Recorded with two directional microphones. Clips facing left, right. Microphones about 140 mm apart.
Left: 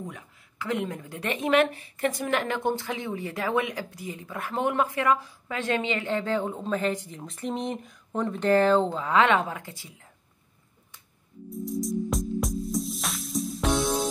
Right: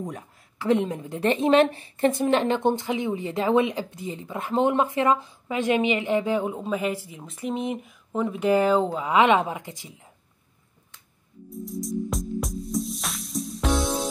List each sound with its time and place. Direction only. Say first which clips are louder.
0.0 s a woman's voice: right 5 dB; 35° right (ahead or behind); by 9.9 s 20° right (ahead or behind)
11.5 s music: left 1 dB; centre (ahead or behind)